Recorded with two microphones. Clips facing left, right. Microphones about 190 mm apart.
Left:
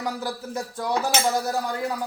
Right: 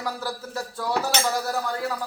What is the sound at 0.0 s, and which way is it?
A man's voice, 20° left (ahead or behind).